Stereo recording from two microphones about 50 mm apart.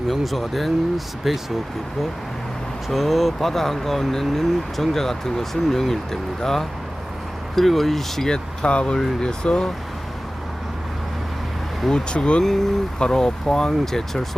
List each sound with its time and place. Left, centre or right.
0.1 s speech: centre
2.9 s speech: centre
8.6 s speech: centre
11.9 s speech: centre